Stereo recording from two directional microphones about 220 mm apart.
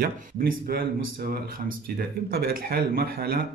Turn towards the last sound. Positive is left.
turn(degrees=-45)  # may be behind; listen again after turning